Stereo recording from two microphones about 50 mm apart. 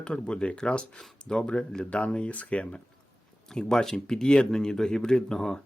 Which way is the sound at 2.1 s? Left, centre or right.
Left.